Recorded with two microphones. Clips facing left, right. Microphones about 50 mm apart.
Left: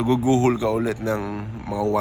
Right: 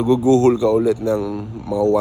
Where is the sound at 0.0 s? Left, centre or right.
Left.